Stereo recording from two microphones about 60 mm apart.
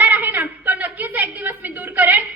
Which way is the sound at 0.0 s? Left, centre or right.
Right.